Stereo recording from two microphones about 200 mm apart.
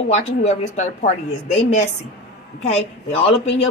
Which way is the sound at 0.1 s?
35° left (ahead or behind).